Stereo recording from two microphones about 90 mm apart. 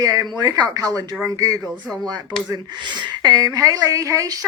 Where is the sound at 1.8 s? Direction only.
10° left (ahead or behind).